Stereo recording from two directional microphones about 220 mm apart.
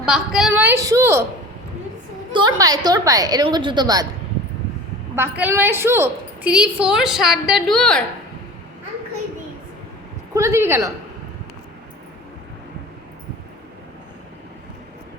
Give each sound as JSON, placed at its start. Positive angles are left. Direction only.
{"t": 0.0, "sound": "a woman's voice", "side_deg": -5}
{"t": 2.3, "sound": "a woman's voice", "side_deg": -20}
{"t": 5.1, "sound": "a woman's voice", "side_deg": -10}
{"t": 10.3, "sound": "a woman's voice", "side_deg": -10}